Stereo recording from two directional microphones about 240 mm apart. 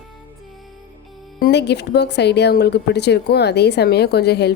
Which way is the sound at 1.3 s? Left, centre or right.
Left.